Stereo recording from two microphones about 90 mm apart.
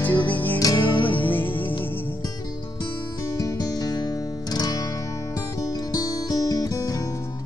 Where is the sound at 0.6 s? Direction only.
40° left (ahead or behind).